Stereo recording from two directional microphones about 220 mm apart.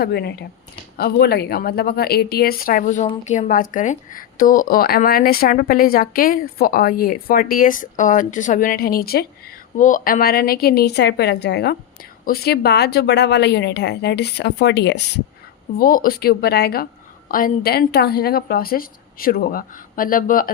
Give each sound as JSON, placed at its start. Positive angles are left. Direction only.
{"t": 0.0, "sound": "speech", "side_deg": 45}
{"t": 15.8, "sound": "speech", "side_deg": 40}